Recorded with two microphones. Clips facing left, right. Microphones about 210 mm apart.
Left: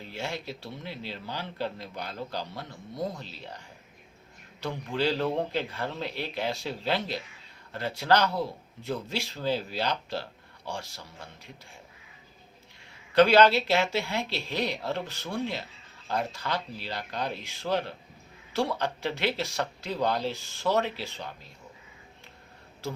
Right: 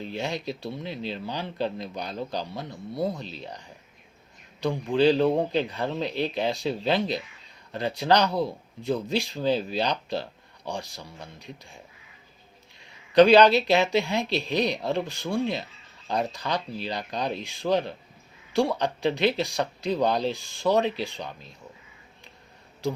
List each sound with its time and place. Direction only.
0.0 s speech: 15° right (ahead or behind)
4.6 s speech: 15° right (ahead or behind)
13.1 s speech: 15° right (ahead or behind)
22.8 s speech: 15° right (ahead or behind)